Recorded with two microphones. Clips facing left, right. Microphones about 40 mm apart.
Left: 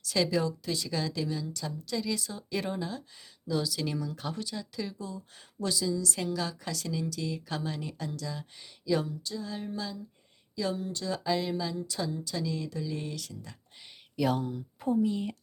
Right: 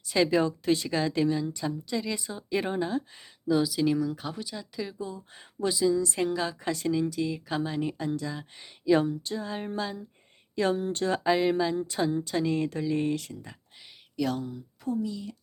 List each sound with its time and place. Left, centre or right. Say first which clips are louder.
0.0 s a woman's voice: right 4 dB; right
3.4 s speech: right 7 dB; centre
4.9 s a woman's voice: right 3 dB; right
14.2 s speech: left 1 dB; centre
14.8 s speech: left 3 dB; left